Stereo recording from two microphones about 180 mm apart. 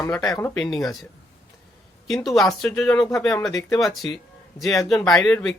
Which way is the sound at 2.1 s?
Centre (ahead or behind).